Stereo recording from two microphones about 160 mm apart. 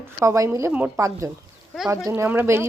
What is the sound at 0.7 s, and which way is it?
Speech, 10° right (ahead or behind).